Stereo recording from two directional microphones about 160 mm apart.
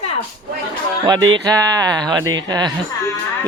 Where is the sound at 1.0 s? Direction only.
25° right (ahead or behind).